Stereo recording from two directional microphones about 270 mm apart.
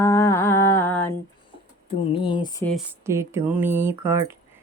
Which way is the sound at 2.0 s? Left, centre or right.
Centre.